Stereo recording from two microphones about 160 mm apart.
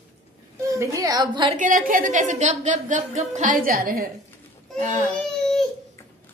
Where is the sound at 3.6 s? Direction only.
65° right (ahead or behind).